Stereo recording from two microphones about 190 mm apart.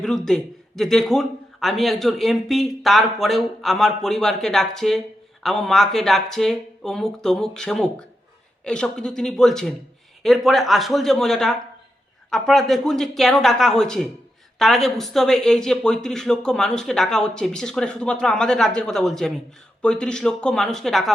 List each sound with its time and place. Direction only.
0.3 s speech: 5° left (ahead or behind)